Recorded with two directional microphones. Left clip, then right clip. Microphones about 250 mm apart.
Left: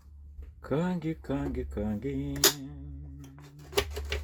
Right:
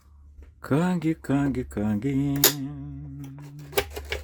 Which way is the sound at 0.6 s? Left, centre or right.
Right.